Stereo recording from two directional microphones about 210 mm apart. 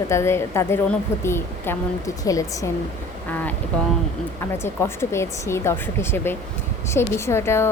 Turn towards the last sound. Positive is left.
turn(degrees=10)  # may be behind; listen again after turning